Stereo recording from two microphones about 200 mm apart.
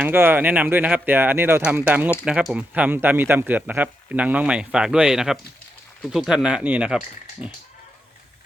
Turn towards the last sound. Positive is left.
turn(degrees=-5)  # may be behind; listen again after turning